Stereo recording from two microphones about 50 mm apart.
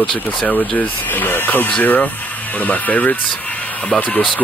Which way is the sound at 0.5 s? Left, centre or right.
Left.